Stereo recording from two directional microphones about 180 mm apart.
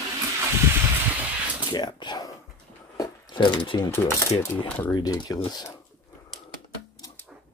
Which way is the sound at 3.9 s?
15° left (ahead or behind).